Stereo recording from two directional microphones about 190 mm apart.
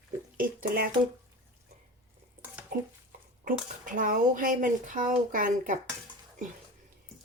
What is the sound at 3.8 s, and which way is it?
Speech, 45° right (ahead or behind).